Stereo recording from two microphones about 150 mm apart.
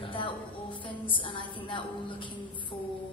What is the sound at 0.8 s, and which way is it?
A woman's voice, 35° left (ahead or behind).